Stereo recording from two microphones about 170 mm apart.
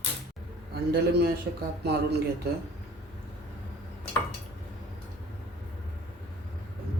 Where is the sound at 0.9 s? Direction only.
65° right (ahead or behind).